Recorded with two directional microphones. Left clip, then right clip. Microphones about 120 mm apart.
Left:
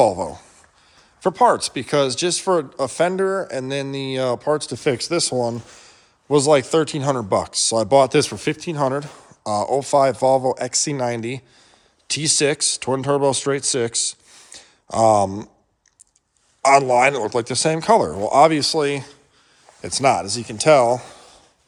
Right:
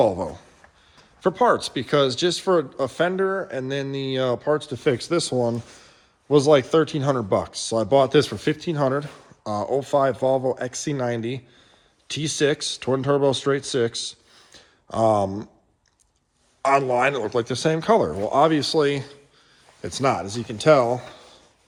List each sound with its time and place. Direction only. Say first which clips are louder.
0.0 s speech: left 3 dB; 30° left (ahead or behind)
3.1 s speech: left 3 dB; 60° left (ahead or behind)
3.5 s speech: left 2 dB; 35° left (ahead or behind)
4.9 s speech: left 2 dB; 15° left (ahead or behind)
6.2 s speech: left 1 dB; 25° left (ahead or behind)
9.4 s speech: left 4 dB; 30° left (ahead or behind)
16.6 s speech: left 5 dB; 40° left (ahead or behind)
20.0 s speech: left 5 dB; 30° left (ahead or behind)